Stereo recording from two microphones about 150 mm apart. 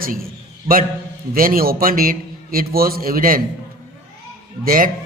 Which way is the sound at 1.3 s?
75° right (ahead or behind).